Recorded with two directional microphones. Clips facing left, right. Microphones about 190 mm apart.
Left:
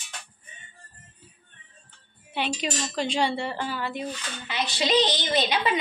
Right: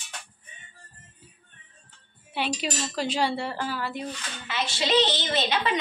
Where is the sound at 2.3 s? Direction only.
5° right (ahead or behind).